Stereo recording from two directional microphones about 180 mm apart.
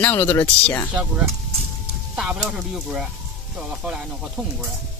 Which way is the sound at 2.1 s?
5° right (ahead or behind).